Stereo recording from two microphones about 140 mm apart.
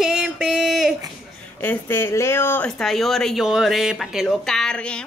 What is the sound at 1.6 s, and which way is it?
Speech, 15° left (ahead or behind).